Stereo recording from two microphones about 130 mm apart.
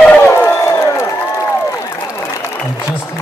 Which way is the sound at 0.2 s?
20° left (ahead or behind).